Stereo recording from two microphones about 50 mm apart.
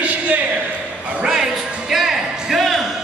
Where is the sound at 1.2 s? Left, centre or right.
Centre.